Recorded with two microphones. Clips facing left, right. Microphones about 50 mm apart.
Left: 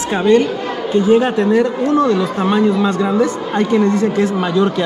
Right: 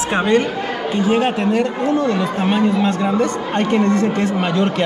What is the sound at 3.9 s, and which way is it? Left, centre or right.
Speech, centre.